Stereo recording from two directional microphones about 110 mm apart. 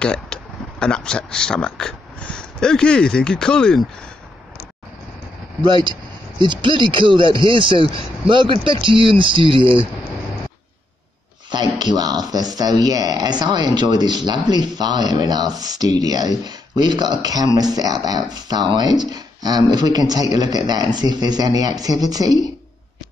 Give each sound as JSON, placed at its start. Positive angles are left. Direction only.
{"t": 0.0, "sound": "speech", "side_deg": 10}
{"t": 5.6, "sound": "speech", "side_deg": -45}
{"t": 11.5, "sound": "speech", "side_deg": -40}